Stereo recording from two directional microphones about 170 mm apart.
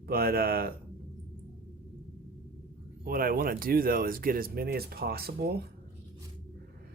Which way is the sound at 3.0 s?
60° right (ahead or behind).